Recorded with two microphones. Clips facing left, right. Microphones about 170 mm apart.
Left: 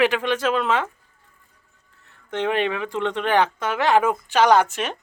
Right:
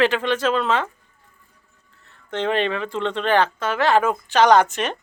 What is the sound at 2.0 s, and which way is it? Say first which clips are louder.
Speech: right 1 dB; 10° left (ahead or behind).